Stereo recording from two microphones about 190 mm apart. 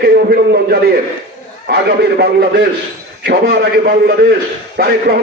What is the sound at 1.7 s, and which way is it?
A man's voice, 60° right (ahead or behind).